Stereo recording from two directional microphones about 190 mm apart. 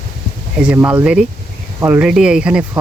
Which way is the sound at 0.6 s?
5° right (ahead or behind).